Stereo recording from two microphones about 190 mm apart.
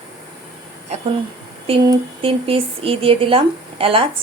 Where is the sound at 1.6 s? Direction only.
30° right (ahead or behind).